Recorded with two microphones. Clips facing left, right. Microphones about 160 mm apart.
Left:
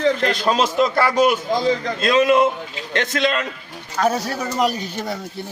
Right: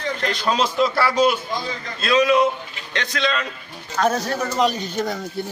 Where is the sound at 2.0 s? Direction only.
50° left (ahead or behind).